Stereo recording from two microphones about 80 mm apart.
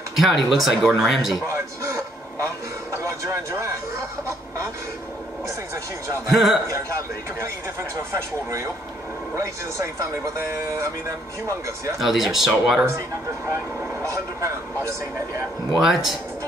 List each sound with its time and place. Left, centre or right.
0.1 s speech: centre
1.5 s television: right
2.9 s a sound: right
6.3 s speech: centre
7.9 s speech: right
12.0 s speech: centre
14.0 s speech: right
15.7 s speech: centre